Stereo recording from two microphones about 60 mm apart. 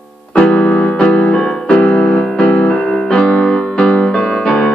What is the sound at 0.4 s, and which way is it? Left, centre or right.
Piano, left.